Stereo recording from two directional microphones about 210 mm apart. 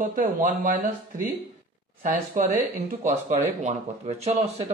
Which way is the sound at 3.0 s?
35° right (ahead or behind).